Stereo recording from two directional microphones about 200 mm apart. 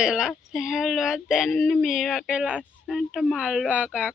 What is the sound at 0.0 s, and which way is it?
Speech, 5° right (ahead or behind).